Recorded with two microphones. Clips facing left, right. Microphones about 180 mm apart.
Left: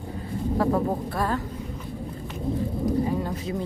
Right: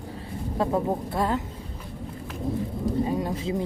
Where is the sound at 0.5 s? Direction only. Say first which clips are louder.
Left 1 dB; 20° right (ahead or behind).